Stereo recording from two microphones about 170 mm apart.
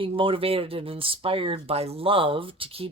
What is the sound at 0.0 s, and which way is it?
Speech, 30° right (ahead or behind).